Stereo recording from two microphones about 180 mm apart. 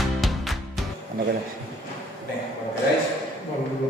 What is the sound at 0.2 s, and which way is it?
Music, centre (ahead or behind).